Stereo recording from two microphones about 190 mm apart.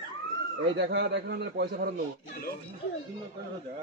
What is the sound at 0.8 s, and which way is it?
Speech, 65° right (ahead or behind).